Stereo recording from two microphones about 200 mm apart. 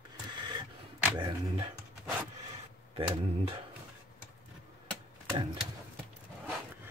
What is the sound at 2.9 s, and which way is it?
Speech, 30° right (ahead or behind).